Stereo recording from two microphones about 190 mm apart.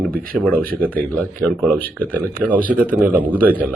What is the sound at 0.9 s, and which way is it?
Speech, 5° left (ahead or behind).